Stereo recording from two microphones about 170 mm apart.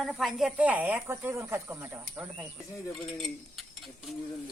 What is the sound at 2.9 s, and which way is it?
Cutlery, centre (ahead or behind).